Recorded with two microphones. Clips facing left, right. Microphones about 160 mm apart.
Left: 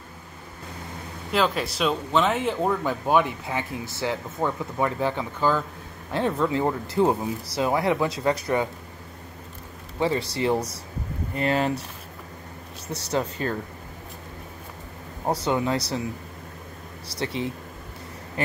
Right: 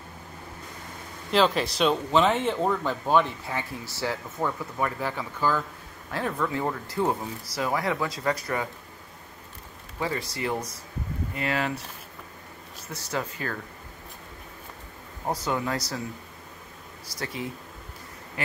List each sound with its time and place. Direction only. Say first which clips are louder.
1.3 s speech: right 1 dB; centre (ahead or behind); by 8.6 s 20° left (ahead or behind)
9.9 s speech: left 6 dB; 25° left (ahead or behind)
12.9 s speech: left 5 dB; 25° left (ahead or behind)
15.4 s speech: left 4 dB; 25° left (ahead or behind)
17.2 s speech: left 5 dB; 25° left (ahead or behind)